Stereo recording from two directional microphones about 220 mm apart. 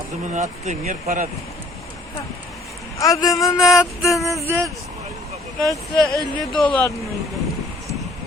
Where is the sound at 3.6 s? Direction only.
Centre (ahead or behind).